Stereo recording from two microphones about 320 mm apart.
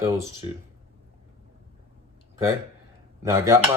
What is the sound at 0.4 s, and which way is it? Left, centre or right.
Dishes, centre.